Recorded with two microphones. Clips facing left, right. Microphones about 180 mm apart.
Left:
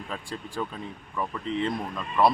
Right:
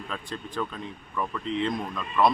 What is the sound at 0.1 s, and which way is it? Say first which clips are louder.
Speech: even; 10° left (ahead or behind).